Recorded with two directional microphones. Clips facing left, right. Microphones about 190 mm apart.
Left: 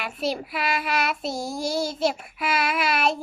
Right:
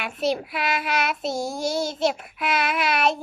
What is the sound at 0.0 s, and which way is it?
A child's voice, centre (ahead or behind).